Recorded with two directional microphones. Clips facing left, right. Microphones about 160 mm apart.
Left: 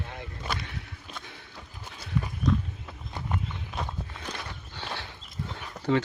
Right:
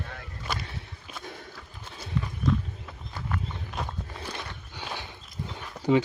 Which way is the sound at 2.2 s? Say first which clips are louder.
Left 1 dB; 10° left (ahead or behind).